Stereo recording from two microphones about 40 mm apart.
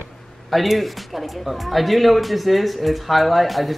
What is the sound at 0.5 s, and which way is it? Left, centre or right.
Speech, centre.